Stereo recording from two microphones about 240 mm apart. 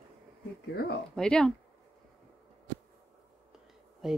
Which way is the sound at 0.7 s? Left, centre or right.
Left.